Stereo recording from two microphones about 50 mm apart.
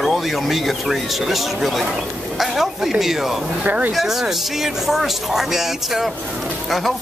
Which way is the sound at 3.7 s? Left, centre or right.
Right.